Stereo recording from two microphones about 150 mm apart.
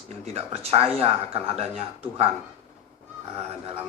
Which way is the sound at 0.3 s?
40° right (ahead or behind).